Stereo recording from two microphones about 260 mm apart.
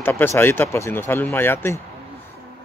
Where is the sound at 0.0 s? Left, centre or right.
Centre.